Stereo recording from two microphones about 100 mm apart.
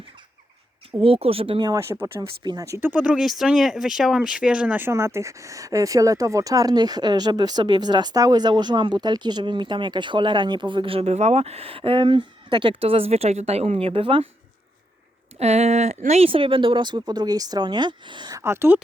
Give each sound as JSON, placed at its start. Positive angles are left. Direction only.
{"t": 1.0, "sound": "speech", "side_deg": -70}
{"t": 1.5, "sound": "speech", "side_deg": -40}
{"t": 1.9, "sound": "speech", "side_deg": -25}
{"t": 2.4, "sound": "speech", "side_deg": -45}
{"t": 2.6, "sound": "speech", "side_deg": -30}
{"t": 2.9, "sound": "speech", "side_deg": -15}
{"t": 3.2, "sound": "speech", "side_deg": -5}
{"t": 4.9, "sound": "speech", "side_deg": -25}
{"t": 15.4, "sound": "speech", "side_deg": -90}
{"t": 18.3, "sound": "speech", "side_deg": -25}